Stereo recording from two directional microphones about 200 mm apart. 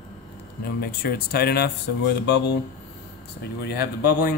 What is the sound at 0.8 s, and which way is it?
Speech, 50° left (ahead or behind).